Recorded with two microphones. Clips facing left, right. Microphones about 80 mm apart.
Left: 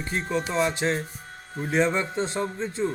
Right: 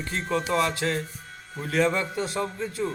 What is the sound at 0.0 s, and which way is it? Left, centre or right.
A man's voice, centre.